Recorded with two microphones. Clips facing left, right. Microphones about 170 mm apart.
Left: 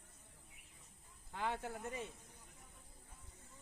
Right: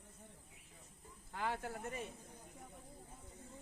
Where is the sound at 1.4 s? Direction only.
20° left (ahead or behind).